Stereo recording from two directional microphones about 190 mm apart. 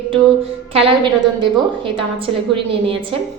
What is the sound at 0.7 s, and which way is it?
A woman's voice, 30° right (ahead or behind).